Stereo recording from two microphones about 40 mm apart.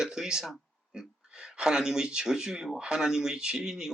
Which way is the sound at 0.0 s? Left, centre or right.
Centre.